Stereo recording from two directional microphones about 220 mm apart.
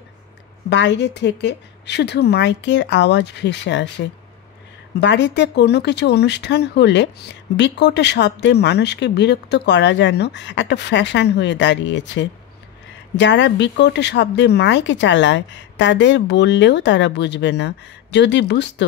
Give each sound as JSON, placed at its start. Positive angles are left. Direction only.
{"t": 0.7, "sound": "speech", "side_deg": 55}